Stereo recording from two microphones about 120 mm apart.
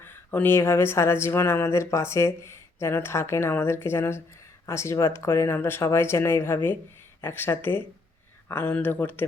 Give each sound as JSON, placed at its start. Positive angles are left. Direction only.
{"t": 0.0, "sound": "speech", "side_deg": 15}